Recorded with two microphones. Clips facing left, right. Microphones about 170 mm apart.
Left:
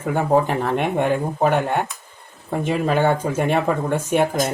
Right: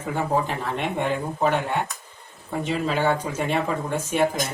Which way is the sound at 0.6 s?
55° left (ahead or behind).